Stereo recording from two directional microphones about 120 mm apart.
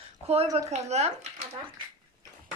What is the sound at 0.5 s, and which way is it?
Speech, 65° right (ahead or behind).